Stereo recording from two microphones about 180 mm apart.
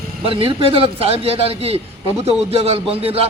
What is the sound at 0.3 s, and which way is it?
A man's voice, 30° right (ahead or behind).